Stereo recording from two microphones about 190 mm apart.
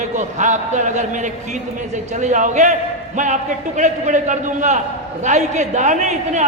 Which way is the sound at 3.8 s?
40° right (ahead or behind).